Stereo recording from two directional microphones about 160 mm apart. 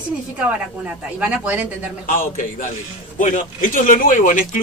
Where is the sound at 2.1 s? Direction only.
55° left (ahead or behind).